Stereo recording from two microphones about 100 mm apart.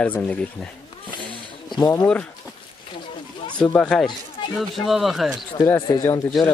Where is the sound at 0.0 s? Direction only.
15° left (ahead or behind).